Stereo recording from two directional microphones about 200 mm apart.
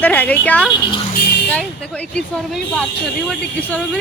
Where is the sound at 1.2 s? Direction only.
55° left (ahead or behind).